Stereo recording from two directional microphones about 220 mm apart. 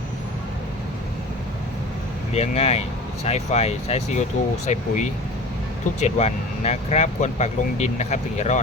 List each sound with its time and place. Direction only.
2.3 s speech: 30° left (ahead or behind)